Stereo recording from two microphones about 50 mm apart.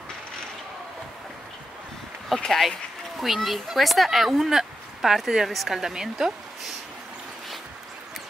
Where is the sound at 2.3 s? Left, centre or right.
Centre.